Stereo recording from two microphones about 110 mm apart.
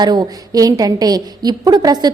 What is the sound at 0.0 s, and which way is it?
A woman's voice, 35° right (ahead or behind).